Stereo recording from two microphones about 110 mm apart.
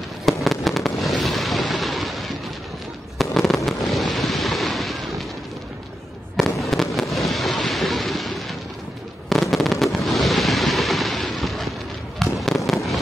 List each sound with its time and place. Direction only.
0.2 s fireworks: centre (ahead or behind)
6.3 s fireworks: centre (ahead or behind)
9.9 s a sound: centre (ahead or behind)
12.2 s fireworks: centre (ahead or behind)